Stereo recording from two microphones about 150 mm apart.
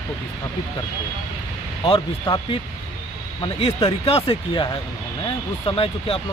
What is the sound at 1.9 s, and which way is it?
Speech, 30° left (ahead or behind).